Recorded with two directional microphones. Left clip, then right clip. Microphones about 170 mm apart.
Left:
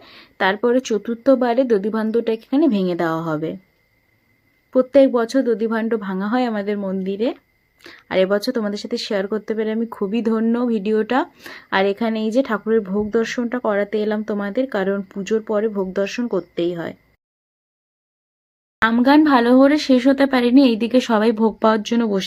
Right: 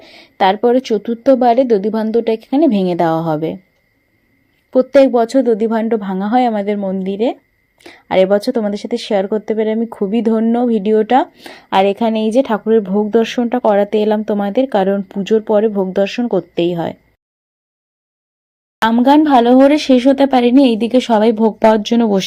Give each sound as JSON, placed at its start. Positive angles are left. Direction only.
{"t": 0.0, "sound": "a woman's voice", "side_deg": -10}
{"t": 4.7, "sound": "a woman's voice", "side_deg": -10}
{"t": 18.9, "sound": "a woman's voice", "side_deg": -5}